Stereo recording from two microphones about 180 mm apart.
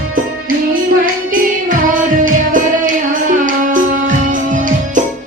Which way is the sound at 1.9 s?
50° right (ahead or behind).